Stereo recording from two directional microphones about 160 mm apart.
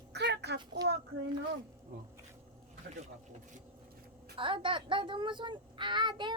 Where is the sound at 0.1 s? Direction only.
90° right.